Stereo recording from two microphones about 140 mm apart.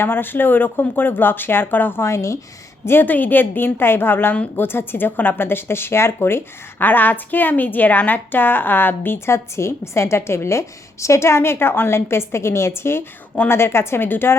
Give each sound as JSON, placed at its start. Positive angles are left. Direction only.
{"t": 0.0, "sound": "a woman's voice", "side_deg": 15}